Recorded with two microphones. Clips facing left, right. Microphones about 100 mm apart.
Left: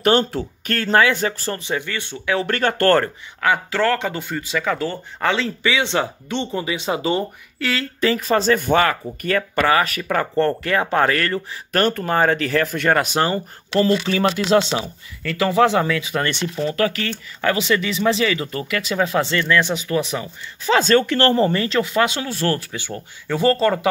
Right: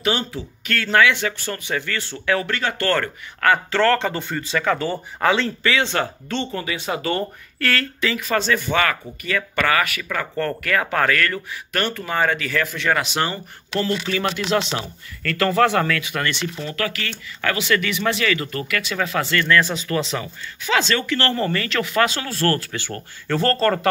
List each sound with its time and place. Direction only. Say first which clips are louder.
0.0 s speech: left 6 dB; 50° left (ahead or behind)
0.7 s speech: left 1 dB; 35° left (ahead or behind)
1.6 s speech: left 1 dB; 20° left (ahead or behind)
2.4 s speech: left 5 dB; 50° left (ahead or behind)
3.4 s speech: right 1 dB; 10° left (ahead or behind)
5.6 s speech: left 1 dB; 15° left (ahead or behind)
8.0 s speech: left 7 dB; 35° left (ahead or behind)
9.6 s speech: left 2 dB; 30° left (ahead or behind)
10.3 s speech: left 2 dB; 30° left (ahead or behind)
14.8 s speech: left 3 dB; 15° left (ahead or behind)
16.0 s speech: left 2 dB; 30° left (ahead or behind)
19.3 s speech: even; 10° left (ahead or behind)
20.6 s speech: left 5 dB; 40° left (ahead or behind)
21.3 s speech: left 5 dB; 25° left (ahead or behind)